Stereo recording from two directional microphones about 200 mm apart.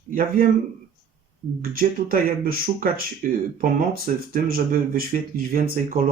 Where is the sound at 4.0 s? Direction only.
45° right (ahead or behind).